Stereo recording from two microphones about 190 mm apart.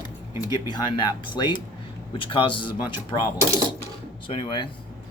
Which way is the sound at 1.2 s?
25° left (ahead or behind).